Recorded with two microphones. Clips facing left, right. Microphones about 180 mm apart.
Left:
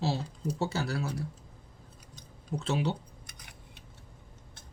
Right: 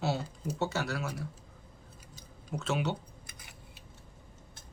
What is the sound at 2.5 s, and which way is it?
Speech, 30° left (ahead or behind).